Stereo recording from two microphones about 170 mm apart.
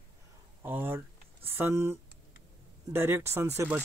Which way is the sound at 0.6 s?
10° right (ahead or behind).